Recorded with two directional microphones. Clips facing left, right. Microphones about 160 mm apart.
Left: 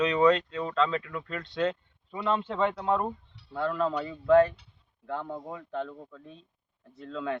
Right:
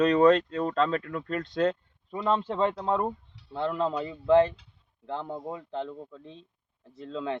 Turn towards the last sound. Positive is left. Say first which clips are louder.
# right 1 dB
turn(degrees=-25)  # may be behind; listen again after turning